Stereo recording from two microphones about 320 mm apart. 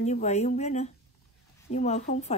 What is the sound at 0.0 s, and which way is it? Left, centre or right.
Speech, left.